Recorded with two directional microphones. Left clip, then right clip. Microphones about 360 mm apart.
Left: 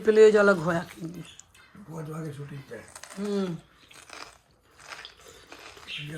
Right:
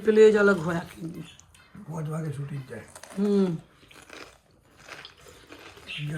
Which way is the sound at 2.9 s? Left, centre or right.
Centre.